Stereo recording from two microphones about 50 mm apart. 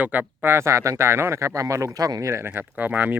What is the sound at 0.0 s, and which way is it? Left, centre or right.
Speech, right.